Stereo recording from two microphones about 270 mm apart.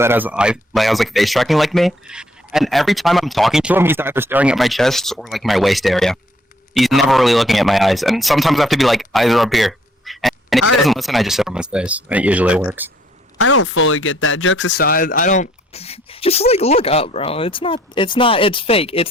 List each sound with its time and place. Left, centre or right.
0.0 s speech: centre
13.4 s speech: left